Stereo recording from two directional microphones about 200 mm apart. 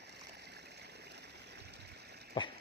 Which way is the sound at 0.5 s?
55° right (ahead or behind).